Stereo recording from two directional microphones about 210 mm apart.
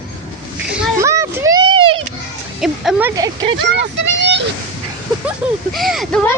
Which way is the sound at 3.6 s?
55° right (ahead or behind).